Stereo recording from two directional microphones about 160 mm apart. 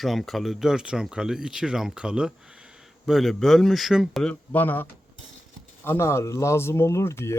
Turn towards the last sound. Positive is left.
turn(degrees=15)  # may be behind; listen again after turning